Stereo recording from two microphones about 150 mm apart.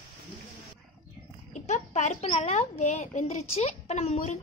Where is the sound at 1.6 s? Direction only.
50° left (ahead or behind).